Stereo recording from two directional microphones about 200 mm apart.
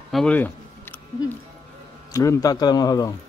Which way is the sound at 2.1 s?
15° left (ahead or behind).